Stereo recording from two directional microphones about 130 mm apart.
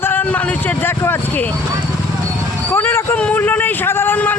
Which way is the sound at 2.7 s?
20° left (ahead or behind).